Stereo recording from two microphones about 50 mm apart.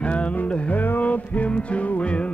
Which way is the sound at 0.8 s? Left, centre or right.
Left.